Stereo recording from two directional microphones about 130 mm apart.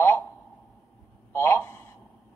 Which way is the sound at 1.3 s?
20° left (ahead or behind).